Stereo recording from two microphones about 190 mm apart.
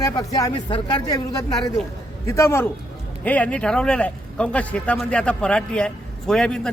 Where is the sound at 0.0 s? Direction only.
20° left (ahead or behind).